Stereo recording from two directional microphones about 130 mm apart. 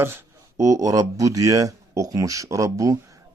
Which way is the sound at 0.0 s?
20° right (ahead or behind).